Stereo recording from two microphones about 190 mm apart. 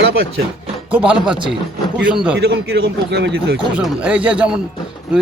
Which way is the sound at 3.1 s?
65° right (ahead or behind).